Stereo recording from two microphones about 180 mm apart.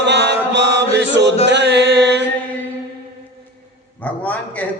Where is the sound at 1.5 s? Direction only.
75° right (ahead or behind).